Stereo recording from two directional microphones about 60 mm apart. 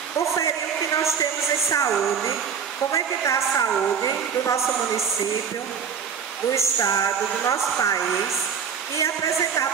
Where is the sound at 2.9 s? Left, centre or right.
Left.